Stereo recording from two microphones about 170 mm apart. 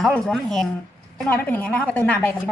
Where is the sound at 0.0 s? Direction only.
Centre (ahead or behind).